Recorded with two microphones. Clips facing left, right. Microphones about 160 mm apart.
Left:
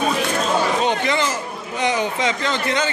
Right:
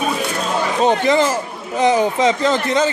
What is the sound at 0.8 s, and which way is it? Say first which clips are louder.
Speech: right 6 dB; 35° right (ahead or behind).